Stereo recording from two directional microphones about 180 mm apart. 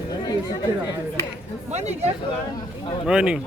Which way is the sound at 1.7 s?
40° right (ahead or behind).